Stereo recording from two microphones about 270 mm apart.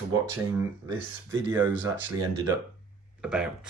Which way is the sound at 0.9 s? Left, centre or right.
Centre.